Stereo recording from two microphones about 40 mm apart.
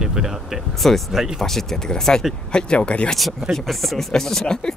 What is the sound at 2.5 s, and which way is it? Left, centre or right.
Speech, left.